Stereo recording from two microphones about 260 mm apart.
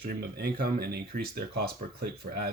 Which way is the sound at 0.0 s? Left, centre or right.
Right.